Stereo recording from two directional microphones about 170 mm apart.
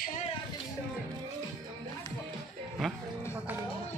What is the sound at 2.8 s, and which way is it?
Music, centre (ahead or behind).